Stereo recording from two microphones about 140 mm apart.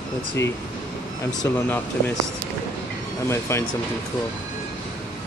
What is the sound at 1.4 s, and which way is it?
Speech, 15° left (ahead or behind).